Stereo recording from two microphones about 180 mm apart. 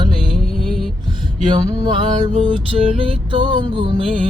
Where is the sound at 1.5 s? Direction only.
25° right (ahead or behind).